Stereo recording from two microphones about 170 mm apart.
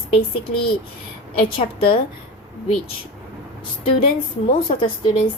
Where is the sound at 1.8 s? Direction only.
30° left (ahead or behind).